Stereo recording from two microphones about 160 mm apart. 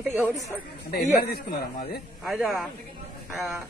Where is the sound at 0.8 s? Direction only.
80° left.